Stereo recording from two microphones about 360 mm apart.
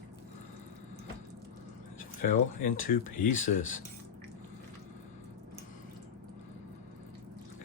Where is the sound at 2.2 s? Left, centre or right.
Left.